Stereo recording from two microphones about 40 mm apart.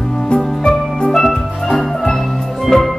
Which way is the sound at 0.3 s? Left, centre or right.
Centre.